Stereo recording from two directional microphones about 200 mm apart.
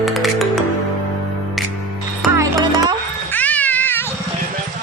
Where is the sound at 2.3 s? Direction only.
20° right (ahead or behind).